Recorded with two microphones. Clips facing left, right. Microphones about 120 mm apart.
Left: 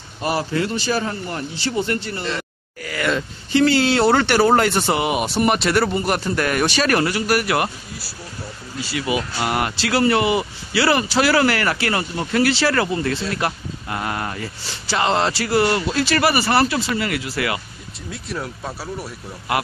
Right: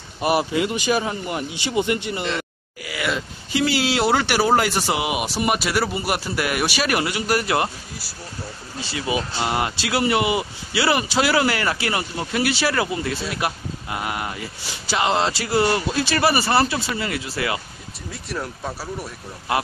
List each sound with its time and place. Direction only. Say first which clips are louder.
0.2 s speech: right 2 dB; 15° right (ahead or behind)
2.2 s speech: even; 5° right (ahead or behind); by 7.7 s 25° right (ahead or behind)
8.9 s speech: left 1 dB; 25° right (ahead or behind)
18.1 s speech: left 1 dB; centre (ahead or behind)